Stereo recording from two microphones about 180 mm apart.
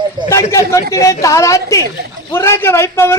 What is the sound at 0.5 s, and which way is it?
Speech, 15° left (ahead or behind).